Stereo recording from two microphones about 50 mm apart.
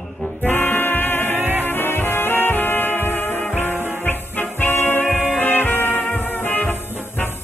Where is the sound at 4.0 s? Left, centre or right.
Left.